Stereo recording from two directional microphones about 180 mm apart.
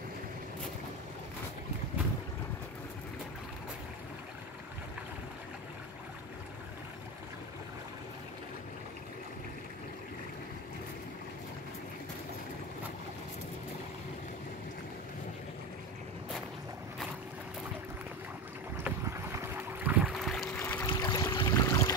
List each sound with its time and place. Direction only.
18.8 s boat: 10° right (ahead or behind)
20.5 s boat: 10° left (ahead or behind)
20.9 s a sound: 20° left (ahead or behind)